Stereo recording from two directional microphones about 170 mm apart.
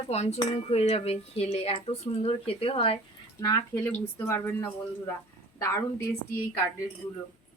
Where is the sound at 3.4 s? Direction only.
20° left (ahead or behind).